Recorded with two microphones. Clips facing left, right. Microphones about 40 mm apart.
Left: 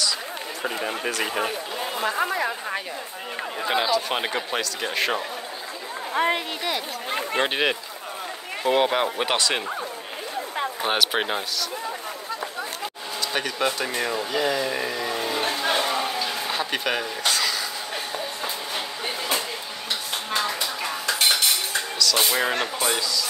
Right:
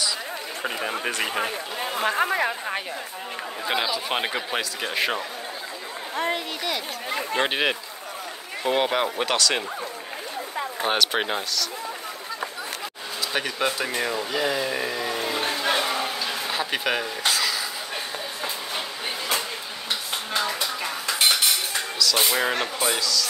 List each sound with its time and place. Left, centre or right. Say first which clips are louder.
1.2 s speech: left 1 dB; centre
2.0 s speech: right 2 dB; right
3.6 s speech: left 3 dB; centre
6.1 s speech: left 4 dB; left
7.3 s speech: even; centre
9.2 s speech: even; centre
10.8 s speech: right 1 dB; centre
13.3 s a sound: even; centre
20.2 s dishes: even; centre
21.9 s speech: even; centre
22.9 s speech: right 1 dB; centre